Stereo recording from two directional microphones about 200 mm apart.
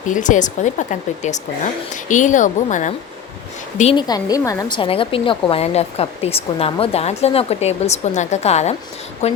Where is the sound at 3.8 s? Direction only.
25° left (ahead or behind).